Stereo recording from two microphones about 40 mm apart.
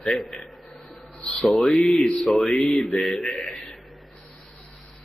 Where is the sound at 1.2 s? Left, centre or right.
Centre.